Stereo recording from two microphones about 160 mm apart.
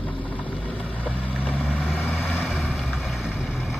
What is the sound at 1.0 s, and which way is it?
Vehicle, 10° left (ahead or behind).